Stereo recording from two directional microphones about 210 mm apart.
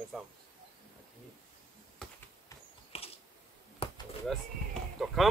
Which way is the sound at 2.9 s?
30° left (ahead or behind).